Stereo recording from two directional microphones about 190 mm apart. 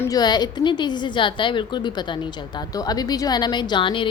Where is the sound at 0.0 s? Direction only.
20° left (ahead or behind).